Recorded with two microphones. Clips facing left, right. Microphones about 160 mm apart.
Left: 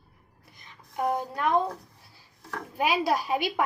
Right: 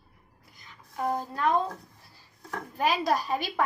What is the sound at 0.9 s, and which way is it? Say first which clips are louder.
Speech: left 2 dB; 20° left (ahead or behind).